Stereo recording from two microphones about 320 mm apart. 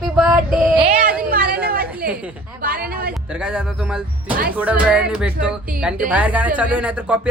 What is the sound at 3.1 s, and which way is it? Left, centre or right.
Speech, centre.